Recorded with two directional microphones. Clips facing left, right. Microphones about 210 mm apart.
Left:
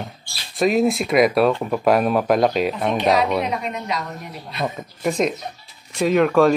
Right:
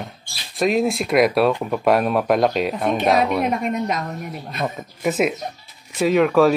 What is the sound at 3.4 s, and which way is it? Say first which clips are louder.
Speech: right 4 dB; 50° right (ahead or behind).